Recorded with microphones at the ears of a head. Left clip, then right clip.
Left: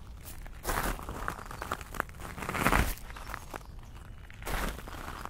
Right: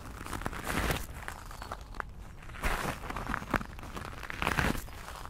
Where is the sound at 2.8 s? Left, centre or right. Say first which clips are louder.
Right 6 dB; right.